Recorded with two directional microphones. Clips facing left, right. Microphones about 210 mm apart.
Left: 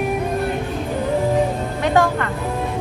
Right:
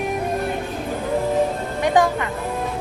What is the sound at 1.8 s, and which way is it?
Music, 15° right (ahead or behind).